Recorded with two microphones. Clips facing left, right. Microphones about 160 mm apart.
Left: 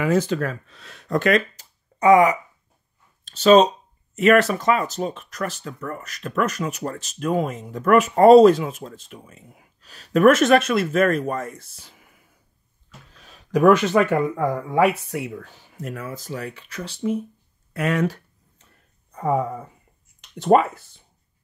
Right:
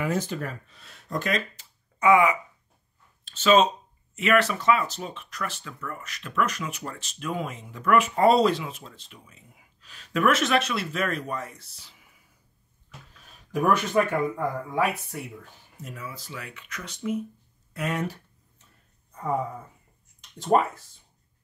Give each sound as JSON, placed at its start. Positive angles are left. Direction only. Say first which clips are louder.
{"t": 0.0, "sound": "speech", "louder": "left 7 dB", "side_deg": 90}
{"t": 1.6, "sound": "a sound", "louder": "left 5 dB", "side_deg": 40}
{"t": 3.3, "sound": "speech", "louder": "left 6 dB", "side_deg": 40}
{"t": 13.2, "sound": "speech", "louder": "left 9 dB", "side_deg": 90}
{"t": 17.7, "sound": "speech", "louder": "left 7 dB", "side_deg": 85}
{"t": 19.1, "sound": "speech", "louder": "left 6 dB", "side_deg": 75}